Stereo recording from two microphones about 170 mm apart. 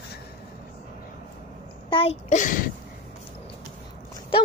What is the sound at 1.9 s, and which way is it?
Speech, 35° left (ahead or behind).